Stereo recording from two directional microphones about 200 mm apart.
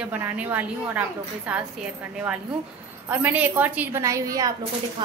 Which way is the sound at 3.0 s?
10° right (ahead or behind).